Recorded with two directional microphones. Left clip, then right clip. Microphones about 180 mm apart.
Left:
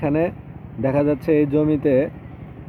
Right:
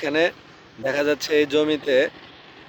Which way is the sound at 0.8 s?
Centre (ahead or behind).